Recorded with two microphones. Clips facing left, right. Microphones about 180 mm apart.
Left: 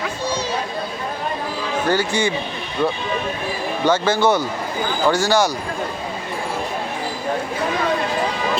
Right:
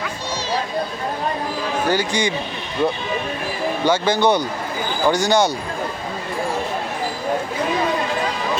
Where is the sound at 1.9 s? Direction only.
15° right (ahead or behind).